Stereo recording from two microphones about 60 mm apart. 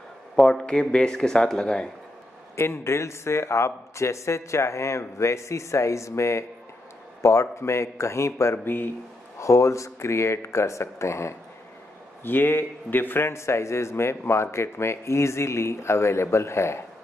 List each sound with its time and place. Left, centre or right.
0.4 s a man's voice: centre
2.5 s a man's voice: left
8.6 s speech: left
9.4 s a man's voice: left
12.2 s speech: left
13.3 s a man's voice: left